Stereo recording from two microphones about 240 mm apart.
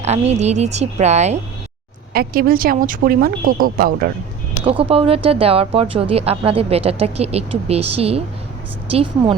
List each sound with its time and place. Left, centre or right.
0.0 s speech: right
2.1 s speech: right
4.6 s speech: right